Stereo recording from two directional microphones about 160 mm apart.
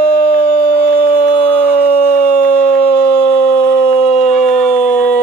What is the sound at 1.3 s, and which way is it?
Howl, 40° left (ahead or behind).